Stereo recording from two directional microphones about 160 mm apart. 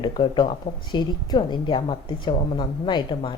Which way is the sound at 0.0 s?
30° left (ahead or behind).